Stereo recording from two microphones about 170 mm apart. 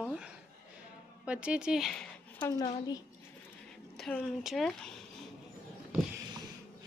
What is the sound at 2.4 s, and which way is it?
Speech, 20° left (ahead or behind).